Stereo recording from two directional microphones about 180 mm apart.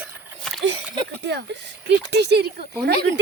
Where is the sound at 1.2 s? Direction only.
70° right (ahead or behind).